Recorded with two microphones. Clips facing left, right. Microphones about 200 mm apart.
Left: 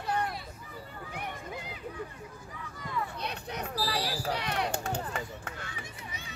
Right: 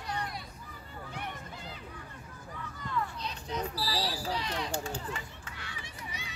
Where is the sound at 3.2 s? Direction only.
65° left (ahead or behind); by 6.2 s 50° left (ahead or behind).